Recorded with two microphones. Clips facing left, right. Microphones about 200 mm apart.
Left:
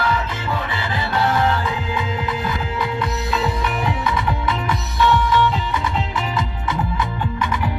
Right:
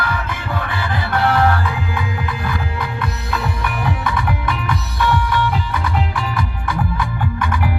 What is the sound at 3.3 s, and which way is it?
Music, 20° left (ahead or behind).